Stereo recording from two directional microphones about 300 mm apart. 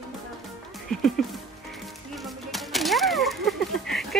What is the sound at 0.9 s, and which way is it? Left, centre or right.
Music, centre.